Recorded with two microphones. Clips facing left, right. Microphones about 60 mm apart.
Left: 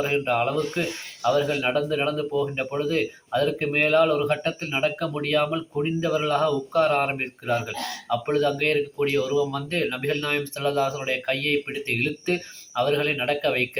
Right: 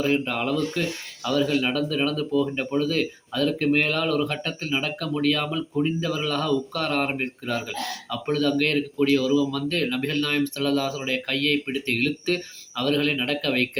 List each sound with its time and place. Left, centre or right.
0.0 s speech: left